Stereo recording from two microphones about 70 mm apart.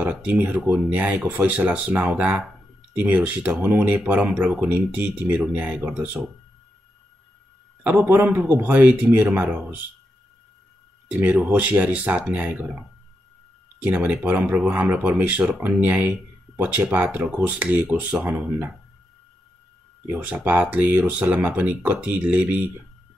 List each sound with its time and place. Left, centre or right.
0.1 s speech: right
7.8 s speech: right
11.1 s speech: right
13.7 s speech: right
20.7 s speech: right